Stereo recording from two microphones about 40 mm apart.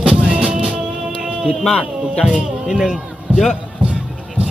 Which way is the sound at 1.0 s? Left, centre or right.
Centre.